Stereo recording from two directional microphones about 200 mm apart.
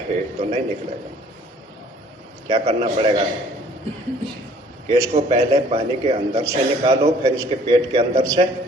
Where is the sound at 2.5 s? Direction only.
30° right (ahead or behind).